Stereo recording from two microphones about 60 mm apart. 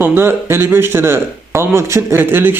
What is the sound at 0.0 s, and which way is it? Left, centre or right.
Speech, right.